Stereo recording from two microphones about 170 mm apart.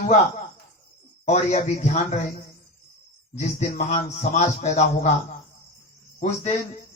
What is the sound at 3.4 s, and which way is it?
A man's voice, 45° left (ahead or behind).